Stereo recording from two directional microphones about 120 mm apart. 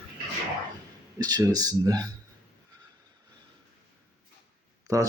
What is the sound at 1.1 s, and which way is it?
Speech, 30° right (ahead or behind).